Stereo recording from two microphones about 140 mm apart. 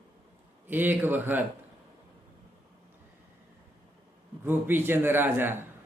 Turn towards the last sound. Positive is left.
turn(degrees=-15)  # may be behind; listen again after turning